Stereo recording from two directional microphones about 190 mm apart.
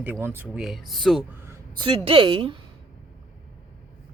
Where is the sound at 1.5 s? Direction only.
25° right (ahead or behind).